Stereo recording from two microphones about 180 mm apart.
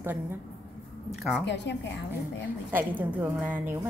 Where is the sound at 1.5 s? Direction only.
75° left (ahead or behind).